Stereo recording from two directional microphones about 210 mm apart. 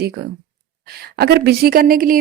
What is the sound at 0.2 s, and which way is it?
A woman's voice, 50° right (ahead or behind).